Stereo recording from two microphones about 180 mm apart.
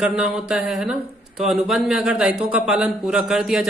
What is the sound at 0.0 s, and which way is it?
Speech, 5° right (ahead or behind).